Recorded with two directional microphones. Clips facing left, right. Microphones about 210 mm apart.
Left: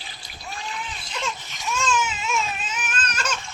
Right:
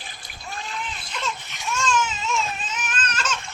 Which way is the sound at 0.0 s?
50° right (ahead or behind).